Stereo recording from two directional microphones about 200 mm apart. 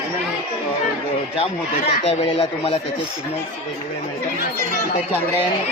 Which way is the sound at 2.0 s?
30° left (ahead or behind).